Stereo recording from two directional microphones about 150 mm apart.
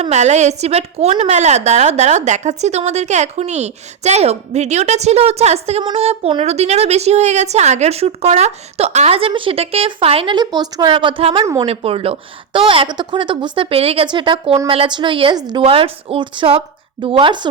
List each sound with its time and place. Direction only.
0.0 s a woman's voice: 50° right (ahead or behind); by 17.5 s 30° right (ahead or behind)